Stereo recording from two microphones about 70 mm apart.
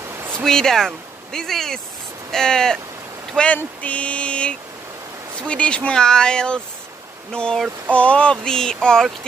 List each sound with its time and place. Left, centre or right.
0.1 s a sound: right
0.4 s speech: centre
3.5 s speech: centre